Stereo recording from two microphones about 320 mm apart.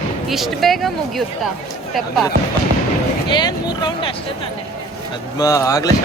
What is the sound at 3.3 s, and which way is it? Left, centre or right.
Speech, centre.